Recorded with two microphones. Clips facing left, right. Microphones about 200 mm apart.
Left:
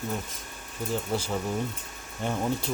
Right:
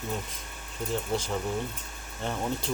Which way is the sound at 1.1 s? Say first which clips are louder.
Left 1 dB; 10° left (ahead or behind).